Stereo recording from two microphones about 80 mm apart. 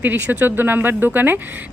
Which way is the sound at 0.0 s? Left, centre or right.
Right.